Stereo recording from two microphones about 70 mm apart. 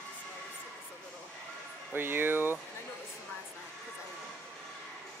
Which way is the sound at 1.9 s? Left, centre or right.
Right.